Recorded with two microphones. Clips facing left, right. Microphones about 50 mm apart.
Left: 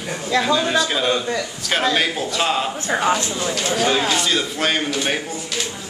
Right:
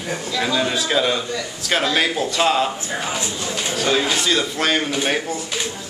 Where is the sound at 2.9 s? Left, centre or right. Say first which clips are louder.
Left 6 dB; left.